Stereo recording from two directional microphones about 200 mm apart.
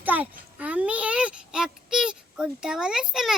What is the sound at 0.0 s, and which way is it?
A child's voice, 10° right (ahead or behind).